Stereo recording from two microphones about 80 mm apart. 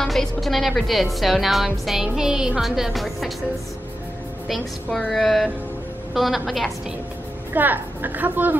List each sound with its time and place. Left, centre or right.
0.0 s speech: centre
4.5 s speech: centre
7.5 s a woman's voice: right